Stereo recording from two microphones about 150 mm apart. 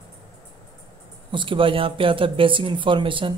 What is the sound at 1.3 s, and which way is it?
Speech, 35° right (ahead or behind).